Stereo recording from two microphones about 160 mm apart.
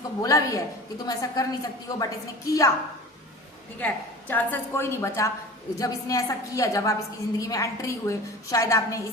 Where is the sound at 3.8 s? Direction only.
10° left (ahead or behind).